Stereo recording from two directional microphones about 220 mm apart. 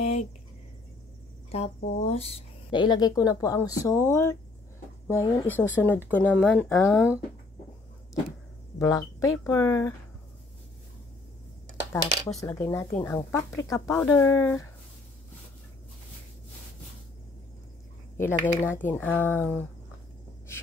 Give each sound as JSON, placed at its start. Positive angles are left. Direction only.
{"t": 0.0, "sound": "a sound", "side_deg": 30}
{"t": 1.5, "sound": "speech", "side_deg": 30}
{"t": 6.4, "sound": "speech", "side_deg": -5}
{"t": 6.7, "sound": "speech", "side_deg": 10}
{"t": 8.7, "sound": "speech", "side_deg": 15}
{"t": 12.4, "sound": "speech", "side_deg": 15}
{"t": 18.1, "sound": "speech", "side_deg": 10}